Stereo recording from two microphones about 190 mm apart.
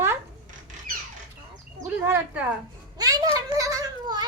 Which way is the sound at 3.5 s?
20° right (ahead or behind).